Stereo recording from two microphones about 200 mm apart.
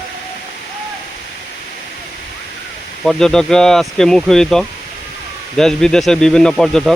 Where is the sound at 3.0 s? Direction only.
Centre (ahead or behind).